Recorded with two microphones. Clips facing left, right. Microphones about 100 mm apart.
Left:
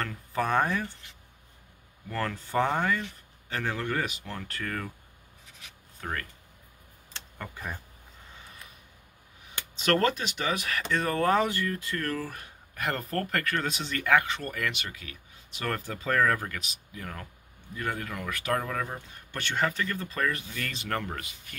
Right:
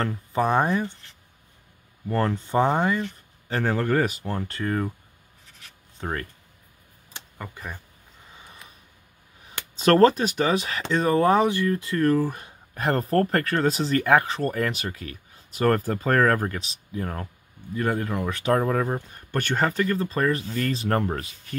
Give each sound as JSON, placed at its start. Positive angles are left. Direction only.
{"t": 0.0, "sound": "speech", "side_deg": -25}
{"t": 2.0, "sound": "speech", "side_deg": -30}
{"t": 3.4, "sound": "speech", "side_deg": -35}
{"t": 5.9, "sound": "speech", "side_deg": -30}
{"t": 7.2, "sound": "speech", "side_deg": -10}
{"t": 9.5, "sound": "speech", "side_deg": -35}
{"t": 10.6, "sound": "speech", "side_deg": -25}
{"t": 12.7, "sound": "speech", "side_deg": -35}
{"t": 16.4, "sound": "speech", "side_deg": -30}